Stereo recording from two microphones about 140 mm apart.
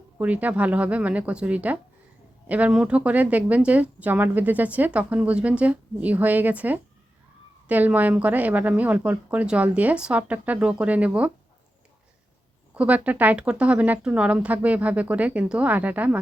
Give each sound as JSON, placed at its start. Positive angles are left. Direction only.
{"t": 0.2, "sound": "a woman's voice", "side_deg": -10}
{"t": 12.7, "sound": "a woman's voice", "side_deg": -10}